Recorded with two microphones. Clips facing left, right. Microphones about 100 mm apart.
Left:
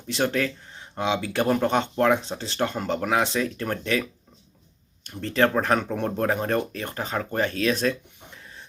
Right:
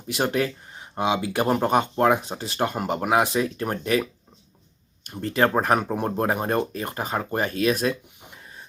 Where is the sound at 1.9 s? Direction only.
15° right (ahead or behind).